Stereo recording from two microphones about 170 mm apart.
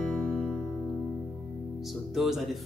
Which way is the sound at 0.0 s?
5° left (ahead or behind).